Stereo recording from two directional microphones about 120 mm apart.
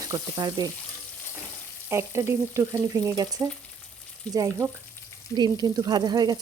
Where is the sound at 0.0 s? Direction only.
30° right (ahead or behind).